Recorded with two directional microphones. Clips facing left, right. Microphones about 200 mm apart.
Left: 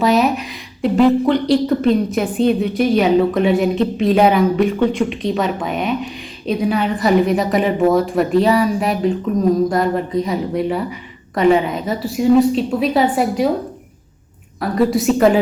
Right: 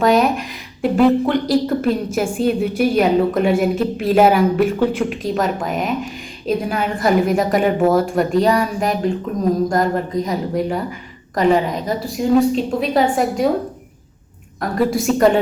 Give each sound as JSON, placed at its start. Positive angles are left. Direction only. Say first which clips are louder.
{"t": 0.0, "sound": "a woman's voice", "louder": "even", "side_deg": 0}
{"t": 14.6, "sound": "a woman's voice", "louder": "left 2 dB", "side_deg": 0}